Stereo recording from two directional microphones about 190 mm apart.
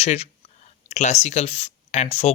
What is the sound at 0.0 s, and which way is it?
Speech, 35° left (ahead or behind).